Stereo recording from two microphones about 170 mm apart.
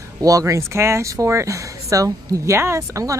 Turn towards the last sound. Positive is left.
turn(degrees=-20)  # may be behind; listen again after turning